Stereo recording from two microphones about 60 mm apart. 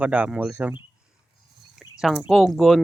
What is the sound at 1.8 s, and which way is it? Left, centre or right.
Speech, centre.